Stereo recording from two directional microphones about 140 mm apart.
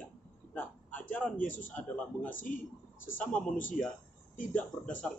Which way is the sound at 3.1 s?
10° left (ahead or behind).